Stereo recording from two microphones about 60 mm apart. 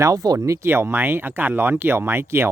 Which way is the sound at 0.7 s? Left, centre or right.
Right.